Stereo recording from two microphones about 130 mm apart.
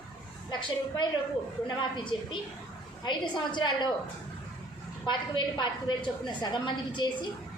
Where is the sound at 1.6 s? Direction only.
35° left (ahead or behind).